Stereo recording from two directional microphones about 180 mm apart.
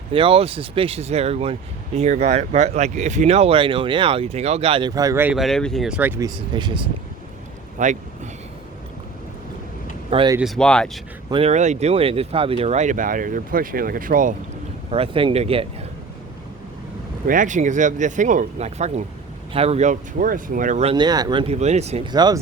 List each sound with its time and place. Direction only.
0.1 s speech: 30° right (ahead or behind); by 5.4 s 10° right (ahead or behind)
5.4 s speech: centre (ahead or behind); by 6.8 s 25° right (ahead or behind)
7.8 s speech: 45° right (ahead or behind)
10.1 s speech: 30° right (ahead or behind)
10.4 s speech: centre (ahead or behind)
11.3 s speech: 35° right (ahead or behind); by 14.3 s 50° right (ahead or behind)
14.8 s speech: 30° right (ahead or behind)
17.2 s speech: 45° right (ahead or behind)
20.9 s speech: 25° right (ahead or behind)
22.1 s speech: 25° right (ahead or behind)